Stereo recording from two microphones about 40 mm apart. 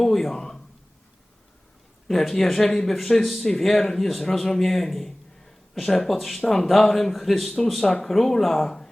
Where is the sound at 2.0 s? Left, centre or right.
Centre.